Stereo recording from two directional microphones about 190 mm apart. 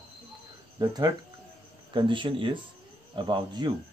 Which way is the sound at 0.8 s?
20° right (ahead or behind).